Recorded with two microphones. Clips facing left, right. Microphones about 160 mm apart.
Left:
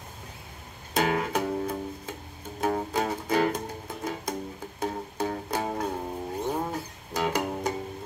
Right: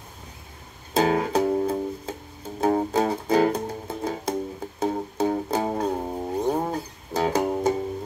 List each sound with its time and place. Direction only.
0.9 s music: 30° right (ahead or behind)